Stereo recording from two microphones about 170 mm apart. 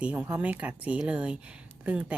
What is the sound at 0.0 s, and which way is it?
Speech, 5° right (ahead or behind).